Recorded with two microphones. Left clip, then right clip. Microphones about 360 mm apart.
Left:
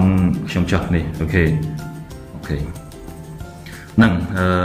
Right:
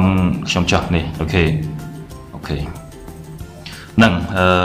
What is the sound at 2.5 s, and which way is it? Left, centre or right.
Speech, right.